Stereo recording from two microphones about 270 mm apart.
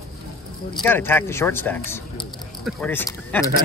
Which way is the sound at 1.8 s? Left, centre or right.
Centre.